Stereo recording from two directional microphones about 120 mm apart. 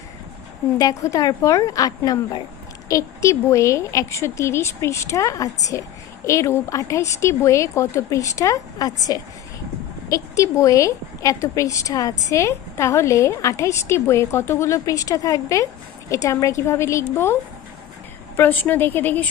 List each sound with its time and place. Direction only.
0.8 s a woman's voice: 30° left (ahead or behind)
18.3 s a woman's voice: 15° left (ahead or behind)